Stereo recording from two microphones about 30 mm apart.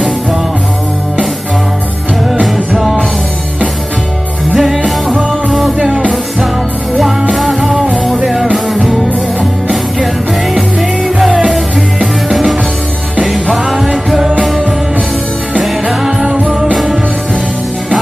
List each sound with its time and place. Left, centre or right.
4.6 s music: centre
7.3 s music: centre
11.1 s music: centre
13.6 s music: centre
15.6 s music: centre
16.3 s music: right